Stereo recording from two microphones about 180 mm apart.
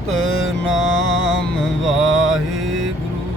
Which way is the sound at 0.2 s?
90° right.